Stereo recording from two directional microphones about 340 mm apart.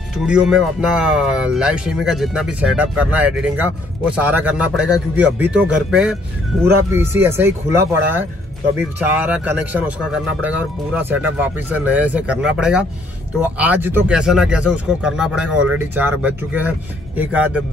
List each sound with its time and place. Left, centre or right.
0.2 s speech: centre
9.0 s speech: centre
11.0 s speech: centre
15.5 s speech: right
15.9 s speech: centre